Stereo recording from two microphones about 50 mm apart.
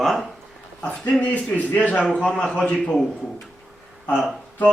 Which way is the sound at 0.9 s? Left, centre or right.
Left.